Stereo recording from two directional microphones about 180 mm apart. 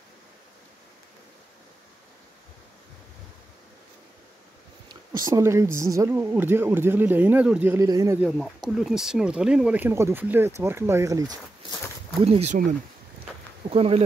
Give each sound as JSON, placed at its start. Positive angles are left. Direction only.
{"t": 4.8, "sound": "speech", "side_deg": -20}
{"t": 8.2, "sound": "speech", "side_deg": 0}
{"t": 12.2, "sound": "speech", "side_deg": -35}
{"t": 13.7, "sound": "speech", "side_deg": -35}